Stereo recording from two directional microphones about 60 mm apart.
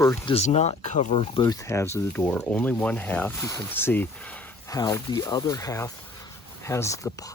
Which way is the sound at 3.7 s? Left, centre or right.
Left.